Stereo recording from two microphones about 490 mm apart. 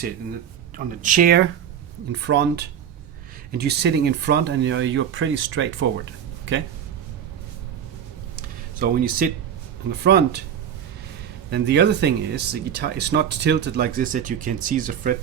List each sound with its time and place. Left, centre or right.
1.0 s speech: centre
8.4 s a sound: centre
9.9 s speech: centre
11.5 s speech: centre